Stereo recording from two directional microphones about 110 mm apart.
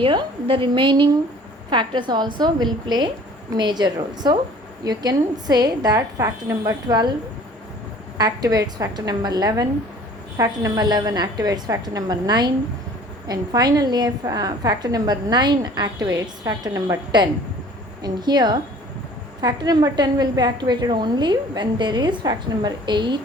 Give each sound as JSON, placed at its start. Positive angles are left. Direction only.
{"t": 0.0, "sound": "a woman's voice", "side_deg": -50}
{"t": 8.2, "sound": "a woman's voice", "side_deg": -35}